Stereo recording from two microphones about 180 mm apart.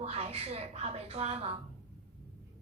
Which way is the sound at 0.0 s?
35° right (ahead or behind).